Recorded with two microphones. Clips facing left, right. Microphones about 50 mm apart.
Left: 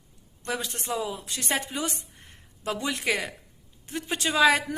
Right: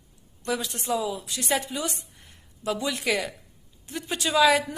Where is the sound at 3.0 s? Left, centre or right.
Left.